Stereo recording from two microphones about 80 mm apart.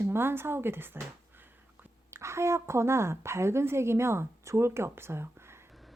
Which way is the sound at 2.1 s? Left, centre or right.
Right.